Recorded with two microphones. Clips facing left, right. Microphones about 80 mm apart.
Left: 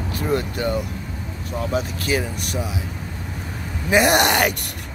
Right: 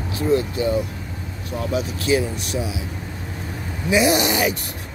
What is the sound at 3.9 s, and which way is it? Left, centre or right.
Speech, left.